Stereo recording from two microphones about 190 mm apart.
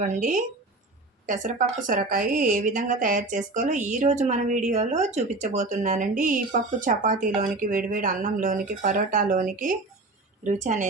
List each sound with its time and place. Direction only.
0.0 s a woman's voice: 40° right (ahead or behind)